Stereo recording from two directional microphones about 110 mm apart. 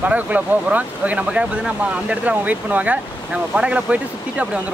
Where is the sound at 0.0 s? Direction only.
15° right (ahead or behind).